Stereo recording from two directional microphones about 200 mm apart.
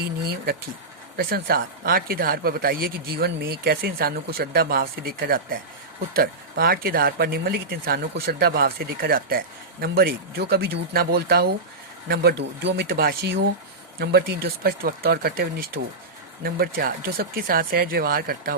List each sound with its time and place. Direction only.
0.0 s speech: 50° right (ahead or behind)